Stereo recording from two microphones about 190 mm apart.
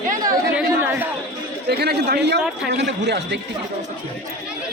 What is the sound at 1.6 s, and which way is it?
A man's voice, 55° right (ahead or behind).